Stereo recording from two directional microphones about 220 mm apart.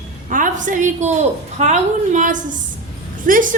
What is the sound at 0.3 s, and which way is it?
A woman's voice, 35° right (ahead or behind).